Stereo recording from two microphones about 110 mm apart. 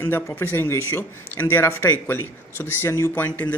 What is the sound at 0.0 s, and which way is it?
Speech, 20° left (ahead or behind).